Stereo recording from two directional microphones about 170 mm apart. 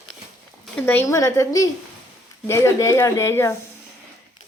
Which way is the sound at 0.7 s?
10° left (ahead or behind).